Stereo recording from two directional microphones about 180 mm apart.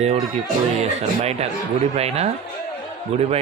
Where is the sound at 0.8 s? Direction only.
35° right (ahead or behind).